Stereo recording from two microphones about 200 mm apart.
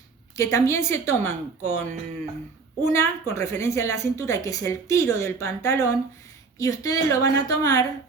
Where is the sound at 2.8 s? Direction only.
15° left (ahead or behind).